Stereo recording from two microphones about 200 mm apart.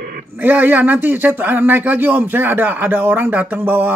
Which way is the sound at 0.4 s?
10° right (ahead or behind).